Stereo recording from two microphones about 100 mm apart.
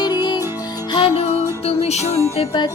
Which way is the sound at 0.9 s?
55° left (ahead or behind).